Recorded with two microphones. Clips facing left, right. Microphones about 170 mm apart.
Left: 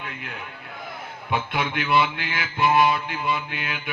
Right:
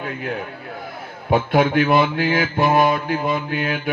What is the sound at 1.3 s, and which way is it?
Mantra, 45° right (ahead or behind).